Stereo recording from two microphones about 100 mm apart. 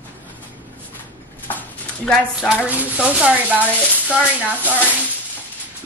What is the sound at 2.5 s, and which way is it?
A woman's voice, 15° right (ahead or behind).